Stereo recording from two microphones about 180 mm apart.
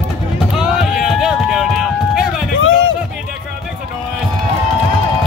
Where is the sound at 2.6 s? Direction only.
90° left.